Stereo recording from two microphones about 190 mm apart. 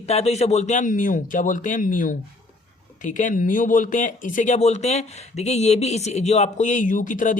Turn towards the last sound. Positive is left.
turn(degrees=45)  # may be behind; listen again after turning